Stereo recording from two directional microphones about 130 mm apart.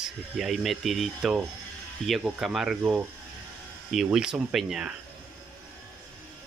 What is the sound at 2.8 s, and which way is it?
Speech, 15° right (ahead or behind).